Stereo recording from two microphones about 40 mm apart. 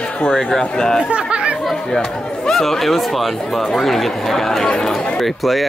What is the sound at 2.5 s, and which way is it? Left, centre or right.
Speech, centre.